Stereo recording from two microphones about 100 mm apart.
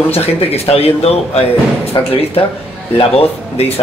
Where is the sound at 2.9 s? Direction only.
80° left.